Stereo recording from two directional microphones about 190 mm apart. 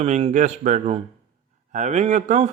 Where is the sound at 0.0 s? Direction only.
35° right (ahead or behind).